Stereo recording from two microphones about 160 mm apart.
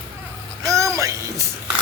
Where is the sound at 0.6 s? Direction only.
20° right (ahead or behind).